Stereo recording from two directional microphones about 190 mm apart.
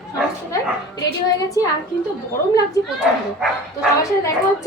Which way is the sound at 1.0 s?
20° left (ahead or behind).